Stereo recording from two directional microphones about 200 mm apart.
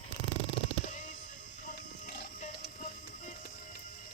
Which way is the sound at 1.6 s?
40° left (ahead or behind).